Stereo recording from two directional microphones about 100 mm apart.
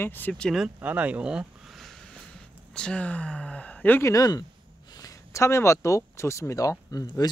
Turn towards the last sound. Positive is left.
turn(degrees=35)  # may be behind; listen again after turning